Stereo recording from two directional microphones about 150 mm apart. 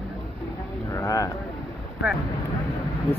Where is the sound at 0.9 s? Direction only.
20° left (ahead or behind).